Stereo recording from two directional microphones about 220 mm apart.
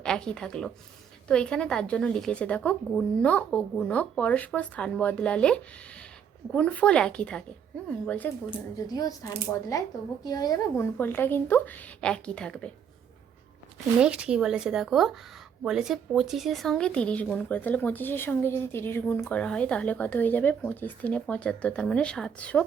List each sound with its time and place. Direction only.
0.0 s a woman's voice: 5° left (ahead or behind)
8.4 s a woman's voice: 15° left (ahead or behind)
14.0 s a woman's voice: 5° right (ahead or behind)